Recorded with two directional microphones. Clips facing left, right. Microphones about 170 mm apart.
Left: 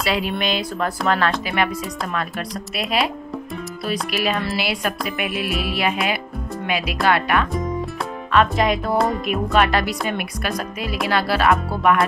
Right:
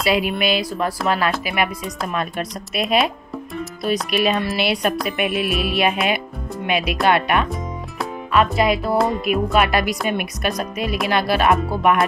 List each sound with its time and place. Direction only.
0.0 s speech: 15° right (ahead or behind)
2.1 s music: 20° right (ahead or behind)
4.1 s music: 20° right (ahead or behind)
8.3 s speech: 5° right (ahead or behind)
11.7 s music: 20° right (ahead or behind)